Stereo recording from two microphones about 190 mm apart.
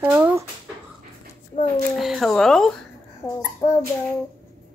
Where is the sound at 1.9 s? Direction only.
Centre (ahead or behind).